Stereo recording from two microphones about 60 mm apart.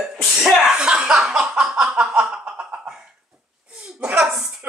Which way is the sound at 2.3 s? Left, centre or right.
Right.